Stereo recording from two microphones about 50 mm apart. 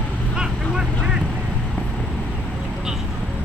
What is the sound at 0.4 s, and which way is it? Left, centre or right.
Vehicle, centre.